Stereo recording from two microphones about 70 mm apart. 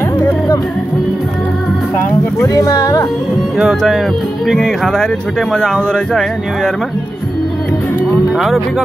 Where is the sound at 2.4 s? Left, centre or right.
Left.